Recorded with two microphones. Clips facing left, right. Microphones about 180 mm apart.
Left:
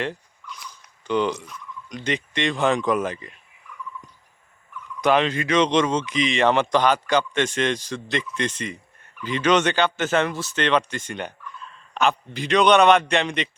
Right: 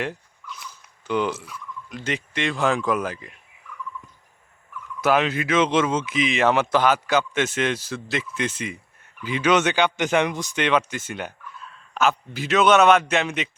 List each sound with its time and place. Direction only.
0.0 s frog: 5° right (ahead or behind)
4.9 s speech: 5° right (ahead or behind)